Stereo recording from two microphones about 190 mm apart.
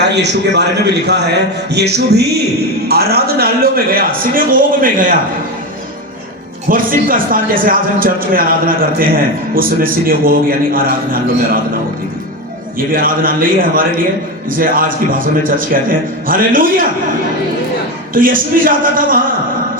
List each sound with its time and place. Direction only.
0.0 s a man's voice: 65° right (ahead or behind); by 5.1 s 45° right (ahead or behind)
6.7 s speech: 45° right (ahead or behind)
12.9 s speech: 50° right (ahead or behind)
18.1 s speech: 45° right (ahead or behind)